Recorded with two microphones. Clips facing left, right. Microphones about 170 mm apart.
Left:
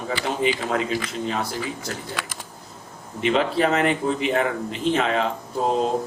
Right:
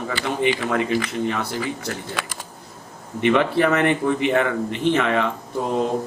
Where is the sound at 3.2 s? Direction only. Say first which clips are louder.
Right 3 dB; 60° right (ahead or behind).